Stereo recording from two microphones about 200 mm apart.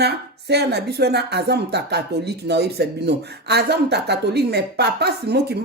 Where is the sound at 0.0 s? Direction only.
55° right (ahead or behind).